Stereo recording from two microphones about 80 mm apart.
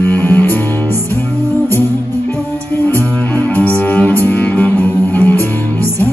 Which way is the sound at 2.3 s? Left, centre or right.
Left.